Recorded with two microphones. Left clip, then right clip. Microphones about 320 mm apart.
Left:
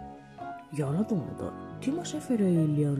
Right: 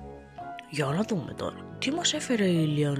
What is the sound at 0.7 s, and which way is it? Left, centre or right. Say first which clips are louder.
Music: right 4 dB; right.